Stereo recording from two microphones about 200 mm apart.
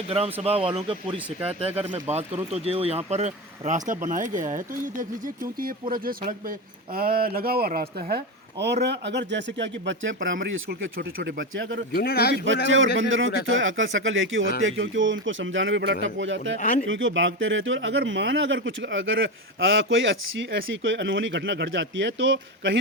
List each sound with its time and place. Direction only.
0.4 s speech: 30° right (ahead or behind); by 10.2 s 65° right (ahead or behind)
10.7 s speech: 55° right (ahead or behind)
11.9 s speech: 50° left (ahead or behind)
13.0 s speech: 70° right (ahead or behind)
16.6 s speech: 40° left (ahead or behind)
16.8 s speech: 70° right (ahead or behind)